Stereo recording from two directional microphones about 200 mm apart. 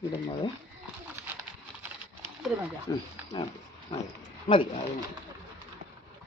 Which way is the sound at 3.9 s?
30° left (ahead or behind).